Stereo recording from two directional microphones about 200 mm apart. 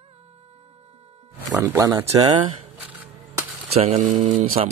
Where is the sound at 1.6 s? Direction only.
15° right (ahead or behind).